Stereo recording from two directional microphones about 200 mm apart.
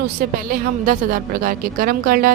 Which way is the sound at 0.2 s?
45° right (ahead or behind).